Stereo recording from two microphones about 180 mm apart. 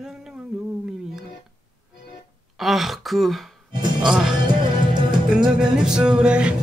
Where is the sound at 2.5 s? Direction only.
Centre (ahead or behind).